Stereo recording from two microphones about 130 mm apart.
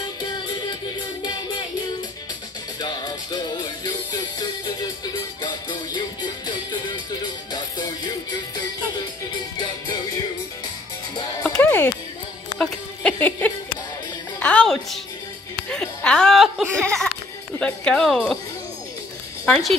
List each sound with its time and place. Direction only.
0.2 s music: 35° left (ahead or behind)
2.8 s music: 35° left (ahead or behind)
11.4 s music: 15° left (ahead or behind)
15.7 s chuckle: 10° left (ahead or behind)
19.4 s speech: 5° left (ahead or behind)